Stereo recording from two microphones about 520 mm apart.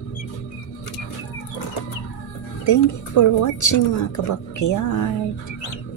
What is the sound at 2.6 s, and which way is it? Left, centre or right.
A woman's voice, left.